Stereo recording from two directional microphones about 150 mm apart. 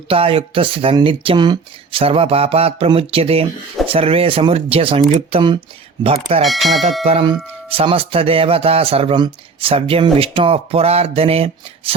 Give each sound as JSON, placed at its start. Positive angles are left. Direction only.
{"t": 0.1, "sound": "speech", "side_deg": -40}
{"t": 6.4, "sound": "speech", "side_deg": 0}
{"t": 7.0, "sound": "speech", "side_deg": -40}